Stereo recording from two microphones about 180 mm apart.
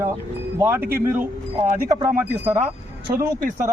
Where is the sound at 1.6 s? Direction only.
50° right (ahead or behind).